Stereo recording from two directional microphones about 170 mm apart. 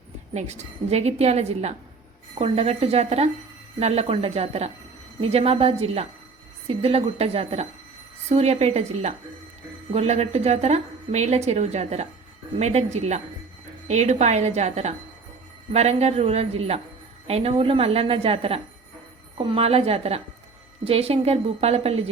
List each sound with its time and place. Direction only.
0.3 s speech: 40° right (ahead or behind)